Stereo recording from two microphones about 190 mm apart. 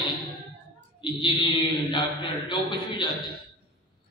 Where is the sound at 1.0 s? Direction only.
25° left (ahead or behind).